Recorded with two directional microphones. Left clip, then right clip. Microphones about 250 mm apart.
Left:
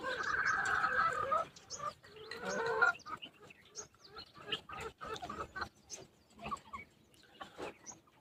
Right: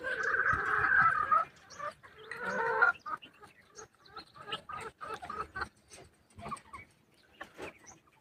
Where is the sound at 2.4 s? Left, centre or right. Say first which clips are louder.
Right 4 dB; left.